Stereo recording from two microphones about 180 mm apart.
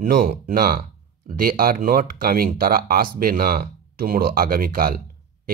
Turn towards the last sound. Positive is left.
turn(degrees=-55)  # may be behind; listen again after turning